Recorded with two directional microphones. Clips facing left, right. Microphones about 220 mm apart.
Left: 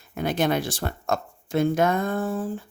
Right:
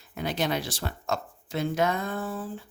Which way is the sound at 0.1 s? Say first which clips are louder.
Left 5 dB; 50° left (ahead or behind).